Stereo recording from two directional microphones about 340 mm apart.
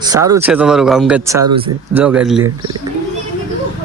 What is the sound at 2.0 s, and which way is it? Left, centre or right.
Speech, centre.